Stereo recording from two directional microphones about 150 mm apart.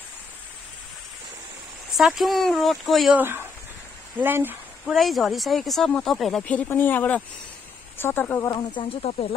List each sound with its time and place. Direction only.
2.0 s speech: centre (ahead or behind)
3.2 s speech: 15° right (ahead or behind)
4.9 s speech: centre (ahead or behind)
8.5 s speech: 35° left (ahead or behind)